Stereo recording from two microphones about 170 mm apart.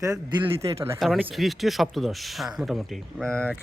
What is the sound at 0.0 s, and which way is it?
Speech, 25° right (ahead or behind).